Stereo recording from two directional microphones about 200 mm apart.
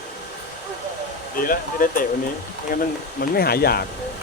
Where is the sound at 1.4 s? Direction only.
45° left (ahead or behind).